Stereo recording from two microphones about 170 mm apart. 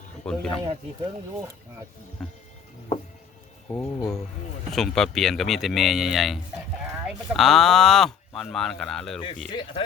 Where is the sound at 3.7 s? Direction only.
10° left (ahead or behind).